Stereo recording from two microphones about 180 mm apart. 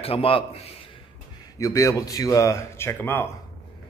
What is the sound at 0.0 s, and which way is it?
Speech, 30° left (ahead or behind).